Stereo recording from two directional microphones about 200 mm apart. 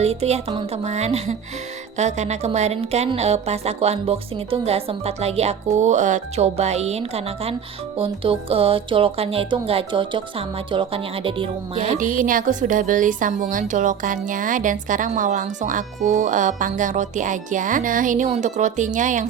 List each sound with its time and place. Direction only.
0.0 s a woman's voice: 30° right (ahead or behind)
11.9 s a woman's voice: 40° right (ahead or behind)